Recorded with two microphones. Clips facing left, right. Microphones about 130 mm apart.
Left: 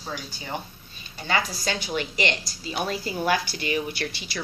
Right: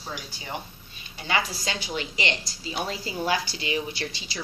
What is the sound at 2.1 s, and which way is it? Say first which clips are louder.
A woman's voice: left 3 dB; 20° right (ahead or behind).